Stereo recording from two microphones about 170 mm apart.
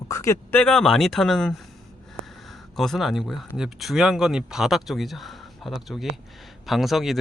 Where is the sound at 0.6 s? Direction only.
5° left (ahead or behind).